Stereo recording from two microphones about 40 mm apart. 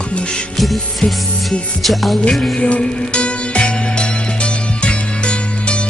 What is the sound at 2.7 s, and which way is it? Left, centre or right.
Music, left.